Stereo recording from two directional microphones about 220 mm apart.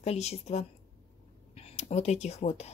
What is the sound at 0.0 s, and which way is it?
Speech, 30° left (ahead or behind).